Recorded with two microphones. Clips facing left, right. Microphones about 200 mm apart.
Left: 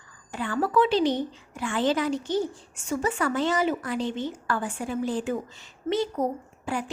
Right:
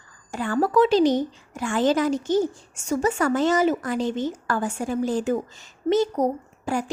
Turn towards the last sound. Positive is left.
turn(degrees=-40)  # may be behind; listen again after turning